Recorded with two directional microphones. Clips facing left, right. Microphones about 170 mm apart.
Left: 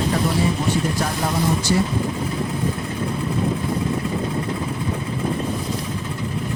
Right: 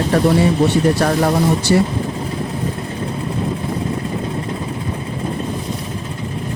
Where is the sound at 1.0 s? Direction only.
70° right (ahead or behind).